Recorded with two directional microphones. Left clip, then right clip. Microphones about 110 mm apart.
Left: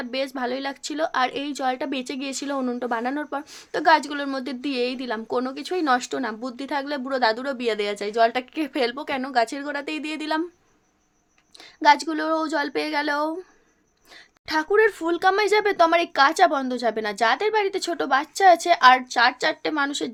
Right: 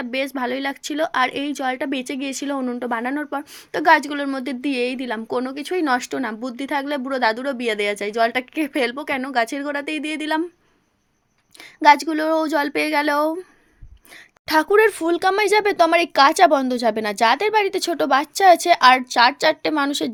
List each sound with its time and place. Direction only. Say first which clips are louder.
0.0 s speech: right 3 dB; 30° right (ahead or behind)
11.5 s speech: right 4 dB; 35° right (ahead or behind)
14.4 s a woman's voice: right 4 dB; 90° right
15.0 s speech: right 2 dB; 40° right (ahead or behind)